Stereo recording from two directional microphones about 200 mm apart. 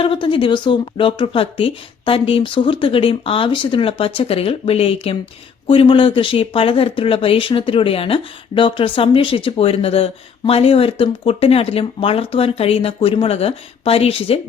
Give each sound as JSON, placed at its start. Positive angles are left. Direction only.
{"t": 0.0, "sound": "speech", "side_deg": 25}